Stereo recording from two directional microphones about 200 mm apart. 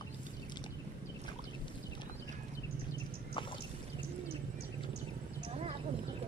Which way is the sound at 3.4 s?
25° left (ahead or behind).